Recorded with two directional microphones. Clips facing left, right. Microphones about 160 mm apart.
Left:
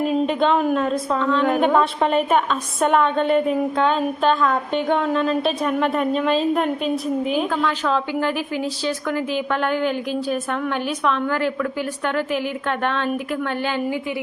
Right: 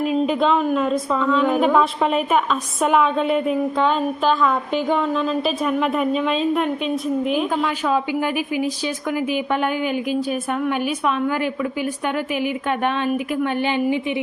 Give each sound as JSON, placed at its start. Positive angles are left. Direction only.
{"t": 0.3, "sound": "a woman's voice", "side_deg": 0}
{"t": 7.5, "sound": "a woman's voice", "side_deg": -10}